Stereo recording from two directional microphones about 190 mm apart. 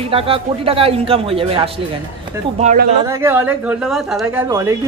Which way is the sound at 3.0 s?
15° right (ahead or behind).